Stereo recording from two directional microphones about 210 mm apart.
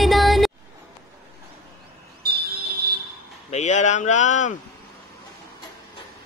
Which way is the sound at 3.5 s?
35° left (ahead or behind).